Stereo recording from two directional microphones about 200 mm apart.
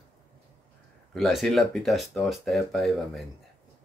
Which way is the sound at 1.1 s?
Centre (ahead or behind).